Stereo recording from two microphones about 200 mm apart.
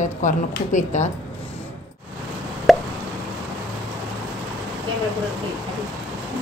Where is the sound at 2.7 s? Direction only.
Centre (ahead or behind).